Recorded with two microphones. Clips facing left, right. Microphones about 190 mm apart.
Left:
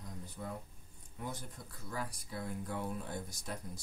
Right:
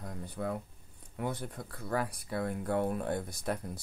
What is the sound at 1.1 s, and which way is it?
Speech, 65° right (ahead or behind).